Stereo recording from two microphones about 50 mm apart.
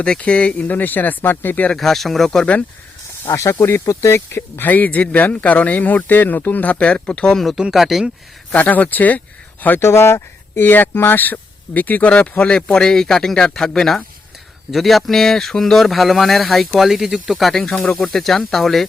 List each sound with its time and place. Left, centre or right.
0.2 s speech: left
1.7 s speech: centre
3.6 s speech: left
3.8 s speech: left
4.7 s speech: left
7.7 s speech: centre
8.5 s speech: left
9.8 s speech: left
10.7 s speech: left
12.7 s speech: centre